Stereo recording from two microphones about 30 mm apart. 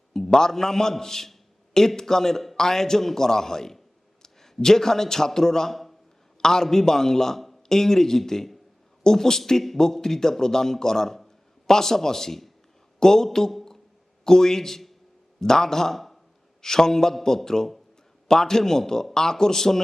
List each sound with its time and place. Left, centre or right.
0.1 s a man's voice: centre
16.6 s a man's voice: centre